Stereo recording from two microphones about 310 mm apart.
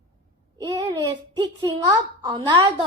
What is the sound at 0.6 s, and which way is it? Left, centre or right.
A child's voice, centre.